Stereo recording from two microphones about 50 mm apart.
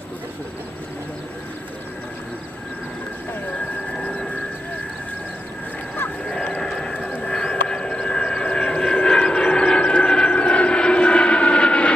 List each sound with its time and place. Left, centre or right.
6.6 s vehicle: centre